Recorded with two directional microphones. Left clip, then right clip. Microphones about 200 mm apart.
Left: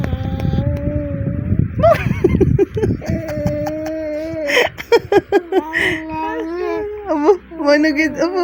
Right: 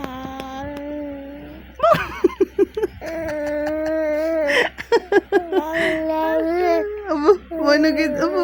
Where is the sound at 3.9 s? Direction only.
25° right (ahead or behind).